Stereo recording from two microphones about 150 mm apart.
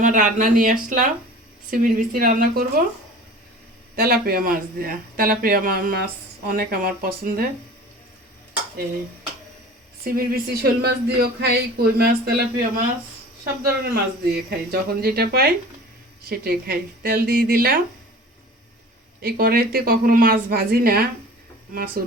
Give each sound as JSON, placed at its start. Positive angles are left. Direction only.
{"t": 0.0, "sound": "a woman's voice", "side_deg": -60}
{"t": 3.9, "sound": "a woman's voice", "side_deg": -85}
{"t": 10.0, "sound": "speech", "side_deg": -85}
{"t": 19.2, "sound": "speech", "side_deg": -75}